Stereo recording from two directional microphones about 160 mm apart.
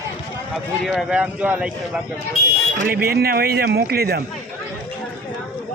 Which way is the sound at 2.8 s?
70° right (ahead or behind).